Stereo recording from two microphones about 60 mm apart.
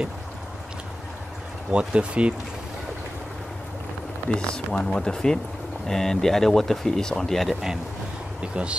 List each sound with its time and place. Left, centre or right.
1.7 s speech: centre
4.3 s speech: centre
8.4 s speech: centre